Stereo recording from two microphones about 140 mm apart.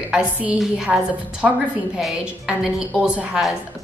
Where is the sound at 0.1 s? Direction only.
10° right (ahead or behind).